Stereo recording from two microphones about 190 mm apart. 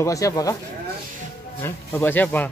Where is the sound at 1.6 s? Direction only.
10° left (ahead or behind).